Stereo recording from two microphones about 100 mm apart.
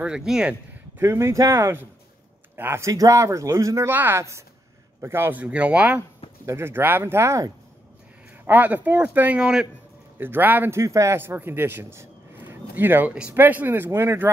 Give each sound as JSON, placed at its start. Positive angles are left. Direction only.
{"t": 0.0, "sound": "speech", "side_deg": -10}
{"t": 0.9, "sound": "speech", "side_deg": -25}
{"t": 5.4, "sound": "speech", "side_deg": -10}
{"t": 6.4, "sound": "speech", "side_deg": -25}
{"t": 8.5, "sound": "speech", "side_deg": -15}
{"t": 10.1, "sound": "a man's voice", "side_deg": -20}